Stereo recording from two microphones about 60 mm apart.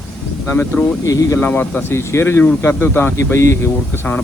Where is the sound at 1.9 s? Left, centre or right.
Left.